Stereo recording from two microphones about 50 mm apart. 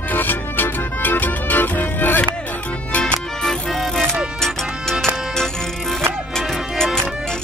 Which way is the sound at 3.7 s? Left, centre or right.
Centre.